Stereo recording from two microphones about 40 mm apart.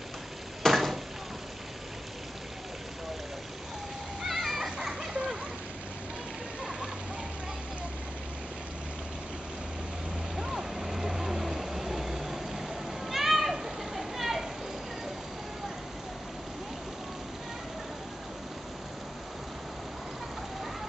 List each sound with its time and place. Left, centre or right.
0.6 s a sound: centre
4.2 s splash: centre
4.6 s children playing: centre
10.3 s vehicle: centre